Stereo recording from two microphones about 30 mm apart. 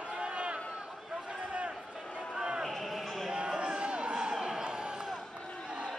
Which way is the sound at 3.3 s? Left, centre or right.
Right.